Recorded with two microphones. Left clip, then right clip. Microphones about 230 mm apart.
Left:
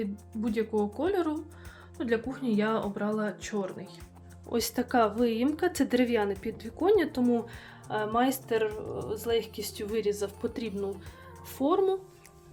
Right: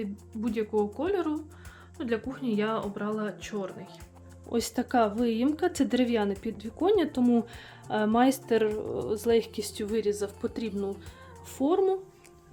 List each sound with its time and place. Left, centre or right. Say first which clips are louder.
0.0 s speech: left 1 dB; centre
9.8 s speech: right 1 dB; centre